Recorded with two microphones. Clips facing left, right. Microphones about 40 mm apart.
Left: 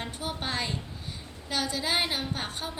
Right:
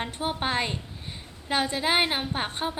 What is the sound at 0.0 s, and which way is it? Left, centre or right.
A woman's voice, right.